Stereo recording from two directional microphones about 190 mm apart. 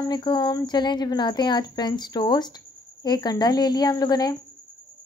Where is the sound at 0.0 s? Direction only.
20° left (ahead or behind).